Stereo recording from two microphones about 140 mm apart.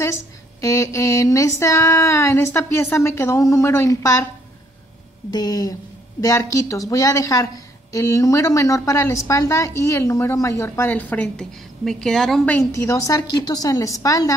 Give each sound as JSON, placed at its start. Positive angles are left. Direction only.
{"t": 0.6, "sound": "a woman's voice", "side_deg": 20}
{"t": 5.3, "sound": "a woman's voice", "side_deg": 30}
{"t": 12.4, "sound": "a woman's voice", "side_deg": 20}